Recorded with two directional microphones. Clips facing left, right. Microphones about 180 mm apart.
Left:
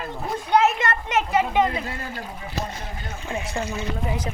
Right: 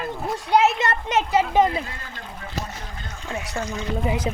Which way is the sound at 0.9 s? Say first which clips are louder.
Right 1 dB; 35° right (ahead or behind).